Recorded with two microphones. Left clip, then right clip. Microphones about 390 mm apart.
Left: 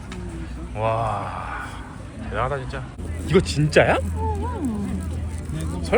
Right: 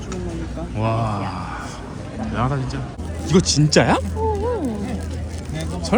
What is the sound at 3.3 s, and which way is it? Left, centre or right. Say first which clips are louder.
Speech: right 1 dB; centre.